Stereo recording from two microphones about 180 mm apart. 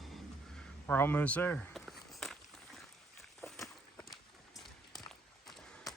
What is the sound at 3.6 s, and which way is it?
Walk, 15° left (ahead or behind).